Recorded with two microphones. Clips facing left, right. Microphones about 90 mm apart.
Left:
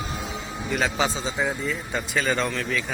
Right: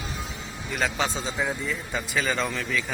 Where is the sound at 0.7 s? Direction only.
Centre (ahead or behind).